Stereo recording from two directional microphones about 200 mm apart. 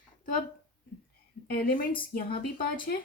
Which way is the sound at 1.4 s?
45° left (ahead or behind).